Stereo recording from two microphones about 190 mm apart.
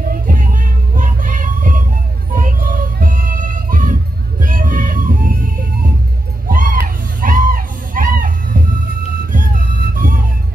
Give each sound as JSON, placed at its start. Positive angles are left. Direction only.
{"t": 0.1, "sound": "music", "side_deg": -45}
{"t": 6.5, "sound": "a sound", "side_deg": -45}
{"t": 7.2, "sound": "music", "side_deg": -45}
{"t": 9.9, "sound": "vehicle", "side_deg": -45}